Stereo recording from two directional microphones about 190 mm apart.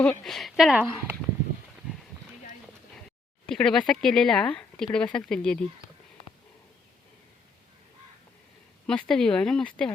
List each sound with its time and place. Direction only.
0.0 s speech: 5° left (ahead or behind)
3.4 s speech: 5° left (ahead or behind)
8.9 s speech: 5° left (ahead or behind)